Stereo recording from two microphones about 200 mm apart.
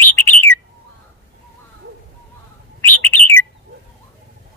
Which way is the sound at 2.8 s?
10° left (ahead or behind).